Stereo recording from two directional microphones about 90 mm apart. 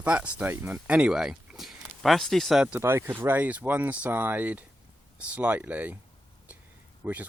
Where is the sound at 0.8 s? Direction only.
10° right (ahead or behind).